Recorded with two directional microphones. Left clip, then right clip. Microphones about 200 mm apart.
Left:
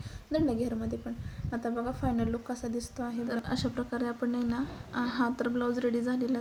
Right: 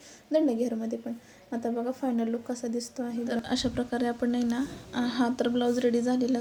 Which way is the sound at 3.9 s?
35° right (ahead or behind).